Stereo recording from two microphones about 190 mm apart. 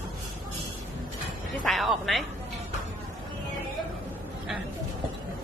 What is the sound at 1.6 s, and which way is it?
Speech, centre (ahead or behind).